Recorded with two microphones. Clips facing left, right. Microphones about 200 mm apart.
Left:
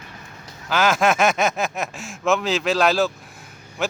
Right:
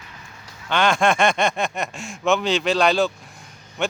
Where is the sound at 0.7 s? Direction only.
5° left (ahead or behind).